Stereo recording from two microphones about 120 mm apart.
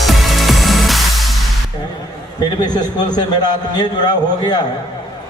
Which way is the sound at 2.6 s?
35° left (ahead or behind).